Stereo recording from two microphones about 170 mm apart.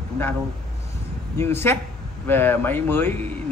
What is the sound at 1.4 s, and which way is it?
A man's voice, 15° left (ahead or behind).